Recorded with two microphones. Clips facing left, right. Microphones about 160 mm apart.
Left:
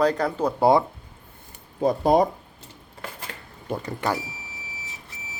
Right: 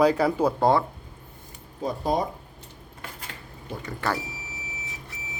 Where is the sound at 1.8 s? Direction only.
65° left (ahead or behind).